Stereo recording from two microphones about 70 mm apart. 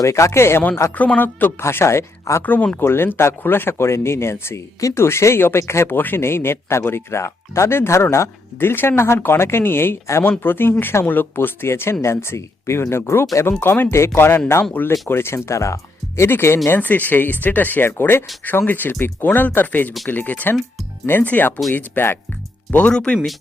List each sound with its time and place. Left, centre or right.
0.0 s speech: left
0.9 s speech: left
1.6 s speech: left
16.6 s speech: left
22.9 s speech: centre